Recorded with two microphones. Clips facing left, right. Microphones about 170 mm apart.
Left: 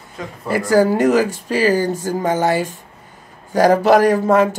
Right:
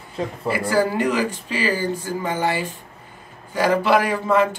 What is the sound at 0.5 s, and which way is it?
Speech, 45° left (ahead or behind).